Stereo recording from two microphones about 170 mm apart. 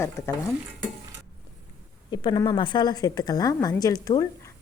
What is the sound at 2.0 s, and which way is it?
Speech, 25° left (ahead or behind).